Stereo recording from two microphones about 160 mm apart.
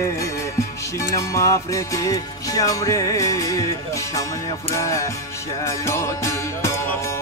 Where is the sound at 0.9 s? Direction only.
20° left (ahead or behind).